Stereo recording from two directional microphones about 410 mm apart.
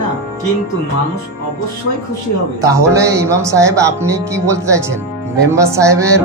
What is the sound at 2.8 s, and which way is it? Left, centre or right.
Speech, centre.